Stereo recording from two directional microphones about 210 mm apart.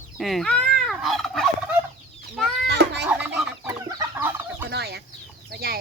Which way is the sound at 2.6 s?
55° right (ahead or behind).